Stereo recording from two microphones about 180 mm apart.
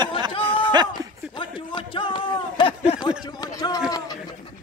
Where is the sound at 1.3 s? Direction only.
25° left (ahead or behind).